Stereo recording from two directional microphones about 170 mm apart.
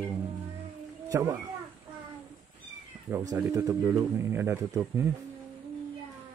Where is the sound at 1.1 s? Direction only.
20° right (ahead or behind).